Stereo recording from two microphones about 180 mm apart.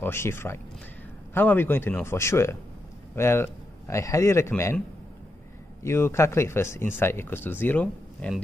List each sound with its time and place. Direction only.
0.0 s a man's voice: 15° left (ahead or behind)
5.8 s a man's voice: 15° left (ahead or behind)